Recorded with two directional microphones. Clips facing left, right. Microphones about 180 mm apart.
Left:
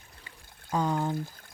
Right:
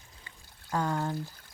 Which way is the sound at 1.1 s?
50° left (ahead or behind).